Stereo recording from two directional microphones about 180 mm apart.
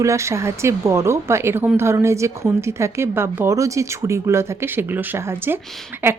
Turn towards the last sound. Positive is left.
turn(degrees=-10)  # may be behind; listen again after turning